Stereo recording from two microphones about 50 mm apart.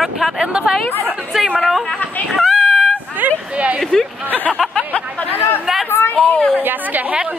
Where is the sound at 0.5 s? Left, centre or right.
Centre.